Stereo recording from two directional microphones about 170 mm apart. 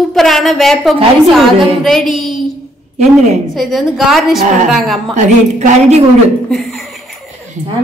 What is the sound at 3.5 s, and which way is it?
A woman's voice, centre (ahead or behind).